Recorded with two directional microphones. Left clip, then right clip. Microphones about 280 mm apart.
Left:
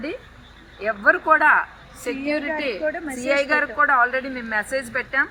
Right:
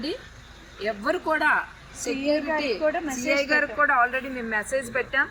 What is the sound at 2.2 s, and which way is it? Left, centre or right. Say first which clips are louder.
Speech: even; centre.